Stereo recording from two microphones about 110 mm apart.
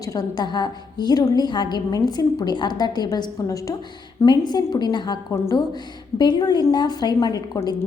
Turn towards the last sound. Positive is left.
turn(degrees=35)  # may be behind; listen again after turning